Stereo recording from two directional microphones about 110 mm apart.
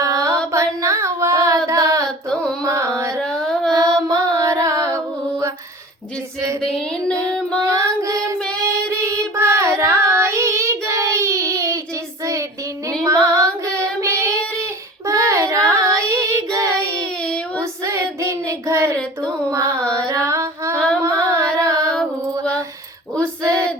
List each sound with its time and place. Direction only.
0.0 s music: 30° right (ahead or behind)
0.5 s child singing: 25° right (ahead or behind)
2.0 s a sound: 5° left (ahead or behind)
2.6 s carnatic music: 30° right (ahead or behind)
3.2 s music: 5° left (ahead or behind)
3.7 s music: 35° right (ahead or behind)
6.6 s a sound: 5° left (ahead or behind)
7.6 s child singing: 30° right (ahead or behind)
19.5 s carnatic music: 30° right (ahead or behind)
20.1 s a sound: 30° right (ahead or behind)
20.7 s singing: 10° left (ahead or behind)
21.0 s carnatic music: 30° right (ahead or behind)
23.1 s female singing: 25° right (ahead or behind)